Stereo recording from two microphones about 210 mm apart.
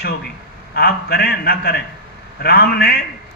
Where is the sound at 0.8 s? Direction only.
45° left (ahead or behind).